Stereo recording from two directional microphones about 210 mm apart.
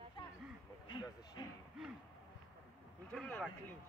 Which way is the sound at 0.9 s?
20° left (ahead or behind).